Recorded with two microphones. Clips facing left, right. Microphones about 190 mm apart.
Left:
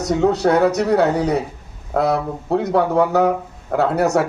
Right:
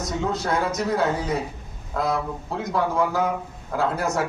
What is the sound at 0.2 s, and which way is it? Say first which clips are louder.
Speech: left 10 dB; 70° left (ahead or behind).